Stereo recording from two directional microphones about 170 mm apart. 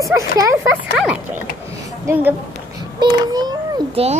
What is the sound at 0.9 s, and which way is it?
A woman's voice, 5° right (ahead or behind).